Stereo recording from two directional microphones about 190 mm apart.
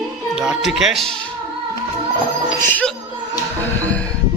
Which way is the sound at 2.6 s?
10° left (ahead or behind).